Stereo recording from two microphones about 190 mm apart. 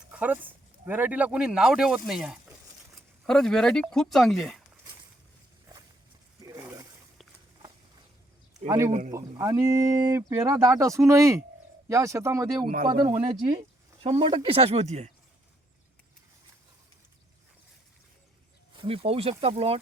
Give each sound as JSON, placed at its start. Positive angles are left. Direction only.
{"t": 0.1, "sound": "speech", "side_deg": -10}
{"t": 6.4, "sound": "a sound", "side_deg": -15}
{"t": 8.9, "sound": "speech", "side_deg": -40}
{"t": 9.1, "sound": "speech", "side_deg": -15}
{"t": 12.6, "sound": "speech", "side_deg": -50}
{"t": 13.1, "sound": "speech", "side_deg": -35}
{"t": 18.7, "sound": "speech", "side_deg": -25}